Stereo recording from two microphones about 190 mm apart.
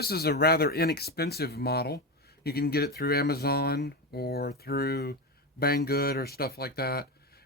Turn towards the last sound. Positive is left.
turn(degrees=55)  # may be behind; listen again after turning